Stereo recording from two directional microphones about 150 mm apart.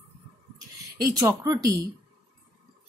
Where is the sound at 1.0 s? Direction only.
25° right (ahead or behind).